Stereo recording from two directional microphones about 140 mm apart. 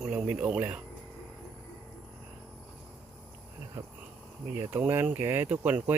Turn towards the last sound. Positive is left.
turn(degrees=-10)  # may be behind; listen again after turning